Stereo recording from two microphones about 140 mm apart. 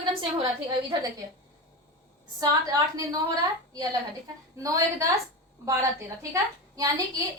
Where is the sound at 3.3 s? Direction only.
25° right (ahead or behind).